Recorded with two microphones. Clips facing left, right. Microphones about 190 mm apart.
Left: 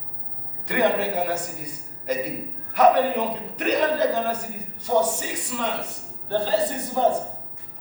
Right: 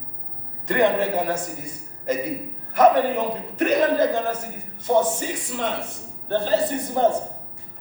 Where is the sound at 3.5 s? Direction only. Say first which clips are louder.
Right 4 dB; 50° right (ahead or behind).